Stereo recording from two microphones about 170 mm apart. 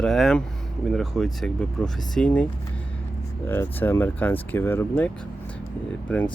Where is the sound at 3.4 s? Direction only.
15° left (ahead or behind).